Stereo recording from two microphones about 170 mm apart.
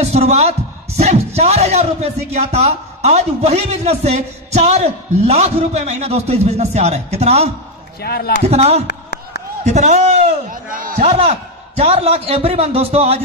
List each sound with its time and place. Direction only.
0.0 s a man's voice: 40° right (ahead or behind)
8.0 s speech: 65° left (ahead or behind)
8.5 s a man's voice: 40° right (ahead or behind)
8.8 s a sound: 75° left (ahead or behind)
9.7 s a man's voice: 40° right (ahead or behind)
10.5 s speech: 55° right (ahead or behind)
11.0 s a man's voice: 35° right (ahead or behind)